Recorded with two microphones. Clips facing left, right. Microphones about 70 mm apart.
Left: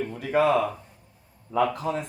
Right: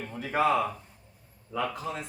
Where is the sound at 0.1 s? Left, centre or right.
Centre.